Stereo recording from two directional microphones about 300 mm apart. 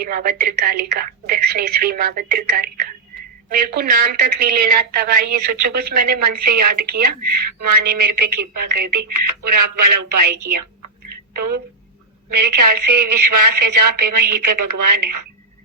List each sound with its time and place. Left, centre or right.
0.0 s a woman's voice: right
5.5 s speech: right
5.9 s a woman's voice: right